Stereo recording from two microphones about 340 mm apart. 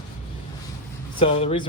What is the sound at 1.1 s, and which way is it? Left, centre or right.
Speech, centre.